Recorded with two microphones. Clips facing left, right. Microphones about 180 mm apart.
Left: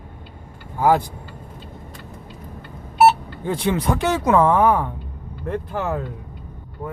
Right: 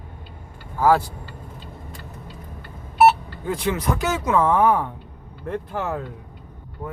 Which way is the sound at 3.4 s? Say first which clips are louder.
Left 3 dB; 30° left (ahead or behind).